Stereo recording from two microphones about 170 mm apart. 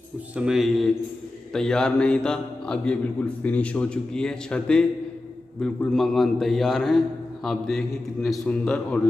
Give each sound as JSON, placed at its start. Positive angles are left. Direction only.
{"t": 0.4, "sound": "a man's voice", "side_deg": -5}